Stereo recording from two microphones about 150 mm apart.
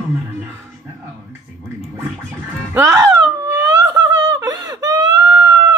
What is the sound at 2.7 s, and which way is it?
Wail, 20° right (ahead or behind).